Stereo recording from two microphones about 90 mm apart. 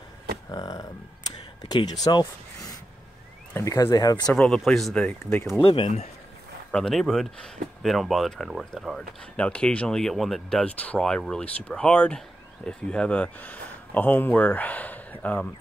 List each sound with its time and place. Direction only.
0.5 s speech: 45° left (ahead or behind)
3.7 s speech: 45° left (ahead or behind)
4.6 s speech: 5° left (ahead or behind)
5.6 s speech: 90° left
6.7 s speech: 5° left (ahead or behind)
9.4 s speech: 15° left (ahead or behind)